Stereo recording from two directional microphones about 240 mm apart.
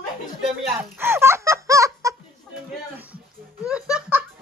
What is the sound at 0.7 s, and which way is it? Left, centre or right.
Music, centre.